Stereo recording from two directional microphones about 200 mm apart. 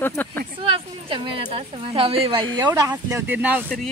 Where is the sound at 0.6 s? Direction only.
25° right (ahead or behind); by 3.9 s 5° right (ahead or behind).